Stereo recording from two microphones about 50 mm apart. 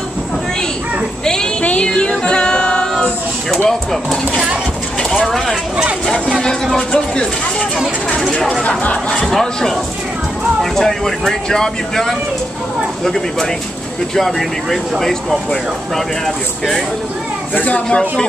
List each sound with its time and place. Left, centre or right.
1.2 s a sound: centre
1.6 s music: left
2.9 s speech: centre
8.2 s speech: centre
8.6 s speech: left
9.1 s speech: centre
17.6 s speech: left
17.8 s speech: centre